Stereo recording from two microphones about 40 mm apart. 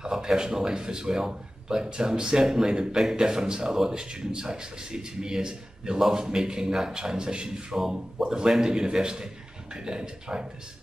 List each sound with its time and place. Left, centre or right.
0.0 s a man's voice: centre